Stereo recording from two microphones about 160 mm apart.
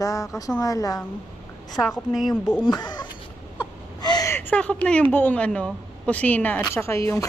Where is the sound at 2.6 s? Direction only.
25° left (ahead or behind).